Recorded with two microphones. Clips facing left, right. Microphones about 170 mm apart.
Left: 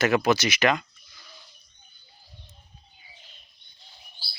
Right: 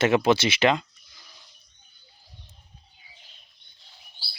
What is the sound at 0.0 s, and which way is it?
Speech, 25° right (ahead or behind).